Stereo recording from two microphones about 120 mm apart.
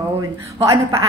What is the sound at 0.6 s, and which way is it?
Speech, 25° right (ahead or behind).